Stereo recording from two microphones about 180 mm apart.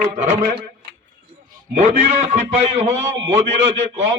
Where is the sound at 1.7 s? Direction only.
40° right (ahead or behind).